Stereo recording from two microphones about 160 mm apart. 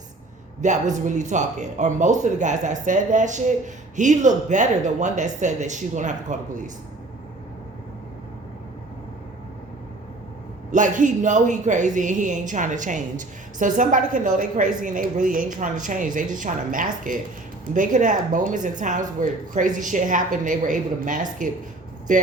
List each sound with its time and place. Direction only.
0.6 s a man's voice: 50° right (ahead or behind)
10.7 s a man's voice: 50° right (ahead or behind)